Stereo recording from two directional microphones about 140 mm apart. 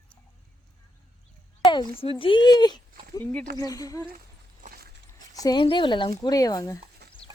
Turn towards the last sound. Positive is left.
turn(degrees=25)  # may be behind; listen again after turning